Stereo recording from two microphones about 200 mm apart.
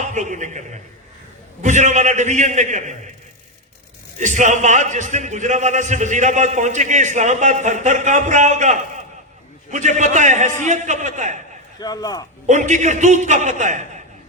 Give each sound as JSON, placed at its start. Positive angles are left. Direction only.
{"t": 0.1, "sound": "a man's voice", "side_deg": -35}
{"t": 4.2, "sound": "a man's voice", "side_deg": -40}
{"t": 11.8, "sound": "a man's voice", "side_deg": 20}
{"t": 12.5, "sound": "a man's voice", "side_deg": -35}